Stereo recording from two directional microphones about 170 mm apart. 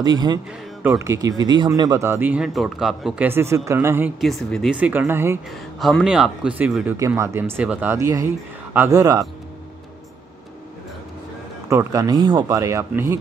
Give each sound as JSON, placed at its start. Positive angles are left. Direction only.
{"t": 0.0, "sound": "speech", "side_deg": -25}
{"t": 4.2, "sound": "speech", "side_deg": 0}
{"t": 5.8, "sound": "speech", "side_deg": 0}
{"t": 11.7, "sound": "speech", "side_deg": -20}